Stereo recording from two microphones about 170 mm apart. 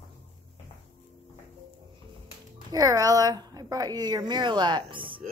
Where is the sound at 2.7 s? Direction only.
20° right (ahead or behind).